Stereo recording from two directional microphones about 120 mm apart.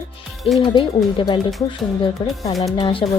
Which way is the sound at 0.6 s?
40° left (ahead or behind).